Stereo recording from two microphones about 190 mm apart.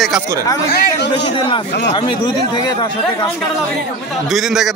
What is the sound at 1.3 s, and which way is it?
Speech, 25° left (ahead or behind).